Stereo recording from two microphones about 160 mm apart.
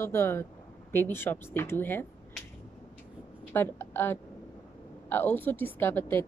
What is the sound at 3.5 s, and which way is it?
A woman's voice, 15° left (ahead or behind).